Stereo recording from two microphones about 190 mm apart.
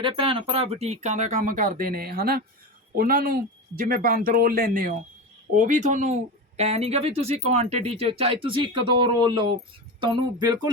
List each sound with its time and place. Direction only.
0.0 s speech: 30° right (ahead or behind)